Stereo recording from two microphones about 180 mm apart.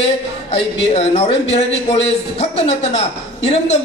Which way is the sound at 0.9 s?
35° left (ahead or behind).